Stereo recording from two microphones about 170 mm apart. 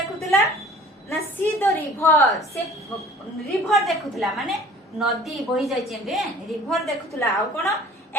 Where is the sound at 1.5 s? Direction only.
15° left (ahead or behind).